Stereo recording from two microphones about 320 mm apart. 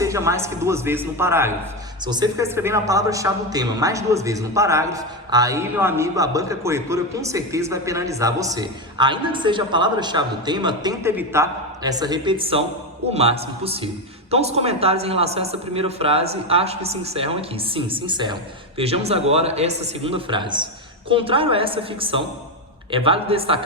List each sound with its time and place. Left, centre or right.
0.0 s a woman's voice: centre